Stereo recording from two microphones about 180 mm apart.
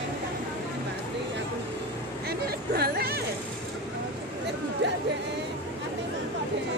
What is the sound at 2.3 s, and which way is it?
Chatter, 60° right (ahead or behind).